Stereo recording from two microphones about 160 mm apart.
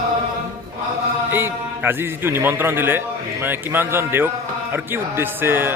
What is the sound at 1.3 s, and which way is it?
A man's voice, 15° right (ahead or behind).